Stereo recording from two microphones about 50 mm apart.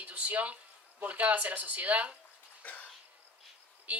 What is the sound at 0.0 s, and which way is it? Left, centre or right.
Speech, right.